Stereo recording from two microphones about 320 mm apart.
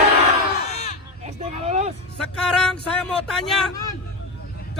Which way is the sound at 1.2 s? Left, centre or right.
Right.